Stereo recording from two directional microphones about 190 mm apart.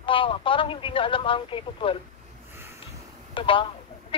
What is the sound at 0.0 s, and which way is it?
Speech, 25° left (ahead or behind).